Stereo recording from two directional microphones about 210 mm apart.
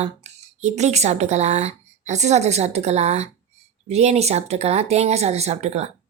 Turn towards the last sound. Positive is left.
turn(degrees=-30)  # may be behind; listen again after turning